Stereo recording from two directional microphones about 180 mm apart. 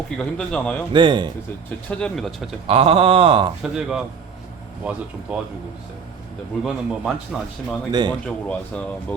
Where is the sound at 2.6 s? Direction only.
30° right (ahead or behind).